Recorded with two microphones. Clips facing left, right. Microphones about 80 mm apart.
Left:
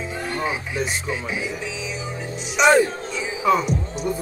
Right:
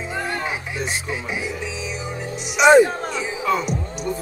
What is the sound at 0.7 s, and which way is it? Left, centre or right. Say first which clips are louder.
Speech: left 1 dB; centre.